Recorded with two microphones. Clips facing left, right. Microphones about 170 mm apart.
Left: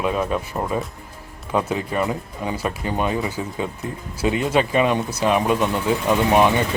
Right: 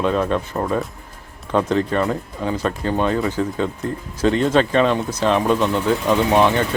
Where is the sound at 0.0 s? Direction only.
10° left (ahead or behind).